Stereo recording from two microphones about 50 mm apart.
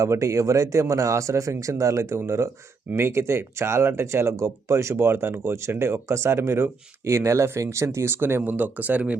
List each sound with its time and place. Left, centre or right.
0.0 s speech: right
4.9 s speech: right
8.5 s speech: right